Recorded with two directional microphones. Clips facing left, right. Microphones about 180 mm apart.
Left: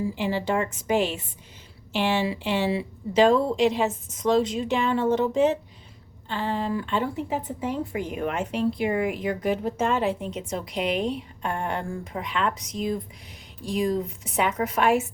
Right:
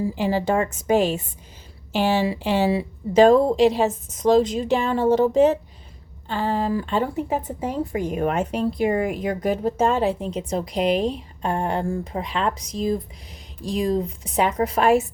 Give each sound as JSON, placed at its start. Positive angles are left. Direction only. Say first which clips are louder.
{"t": 0.2, "sound": "a woman's voice", "louder": "right 5 dB", "side_deg": -40}